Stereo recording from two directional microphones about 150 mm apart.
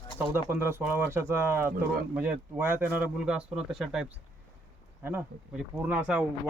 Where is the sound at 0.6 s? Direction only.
15° right (ahead or behind).